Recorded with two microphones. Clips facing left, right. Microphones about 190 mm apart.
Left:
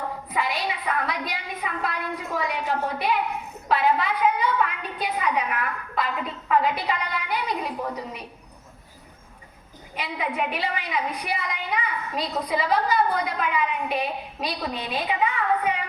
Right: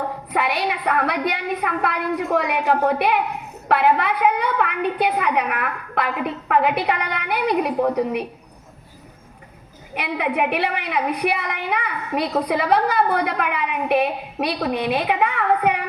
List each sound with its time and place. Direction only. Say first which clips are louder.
0.3 s a woman's voice: right 5 dB; 65° right (ahead or behind)
9.9 s a woman's voice: right 6 dB; 65° right (ahead or behind)